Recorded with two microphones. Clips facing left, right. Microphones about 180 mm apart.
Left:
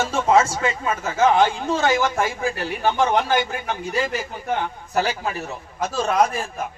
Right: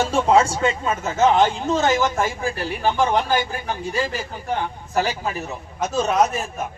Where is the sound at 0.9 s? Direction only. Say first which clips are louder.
Left 1 dB; 10° left (ahead or behind).